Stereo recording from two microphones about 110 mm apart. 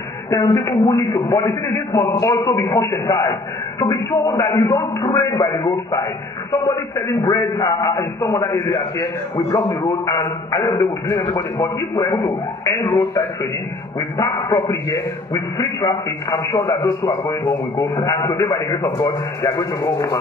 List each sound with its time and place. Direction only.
0.3 s a man's voice: 30° left (ahead or behind)